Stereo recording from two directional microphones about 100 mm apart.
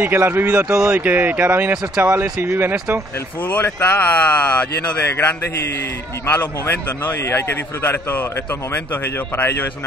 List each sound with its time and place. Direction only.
0.0 s speech: 20° right (ahead or behind)
3.4 s a man's voice: 20° left (ahead or behind)